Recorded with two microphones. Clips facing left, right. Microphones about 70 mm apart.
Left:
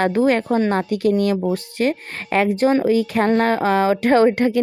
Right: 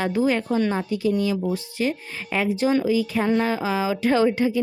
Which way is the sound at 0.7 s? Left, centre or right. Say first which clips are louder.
Left 5 dB; left.